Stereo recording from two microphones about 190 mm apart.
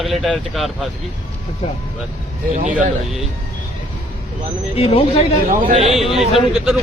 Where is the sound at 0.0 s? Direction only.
Centre (ahead or behind).